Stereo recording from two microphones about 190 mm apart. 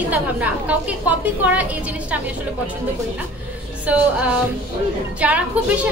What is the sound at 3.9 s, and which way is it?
Speech, 10° right (ahead or behind).